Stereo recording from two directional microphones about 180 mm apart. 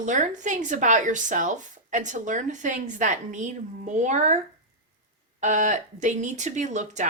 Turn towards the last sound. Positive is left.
turn(degrees=-40)  # may be behind; listen again after turning